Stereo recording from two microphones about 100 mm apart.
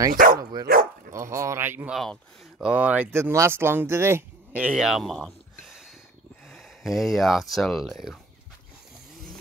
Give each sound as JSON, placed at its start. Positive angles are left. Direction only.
{"t": 0.0, "sound": "speech", "side_deg": -40}
{"t": 1.9, "sound": "speech", "side_deg": 5}
{"t": 2.6, "sound": "speech", "side_deg": -15}
{"t": 3.1, "sound": "speech", "side_deg": -25}
{"t": 4.5, "sound": "speech", "side_deg": -15}
{"t": 4.8, "sound": "a sound", "side_deg": 0}
{"t": 6.4, "sound": "speech", "side_deg": 0}